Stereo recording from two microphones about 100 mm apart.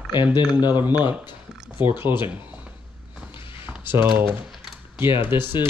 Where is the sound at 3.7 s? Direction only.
20° right (ahead or behind).